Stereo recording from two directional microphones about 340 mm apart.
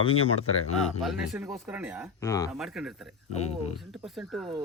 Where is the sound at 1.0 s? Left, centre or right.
Centre.